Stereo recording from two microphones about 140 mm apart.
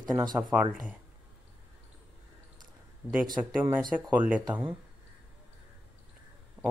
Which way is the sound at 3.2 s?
30° right (ahead or behind).